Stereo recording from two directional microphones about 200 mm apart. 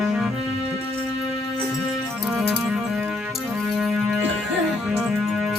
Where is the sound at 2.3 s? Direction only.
5° right (ahead or behind).